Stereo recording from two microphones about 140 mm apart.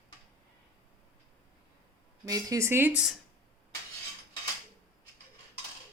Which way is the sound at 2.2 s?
25° right (ahead or behind).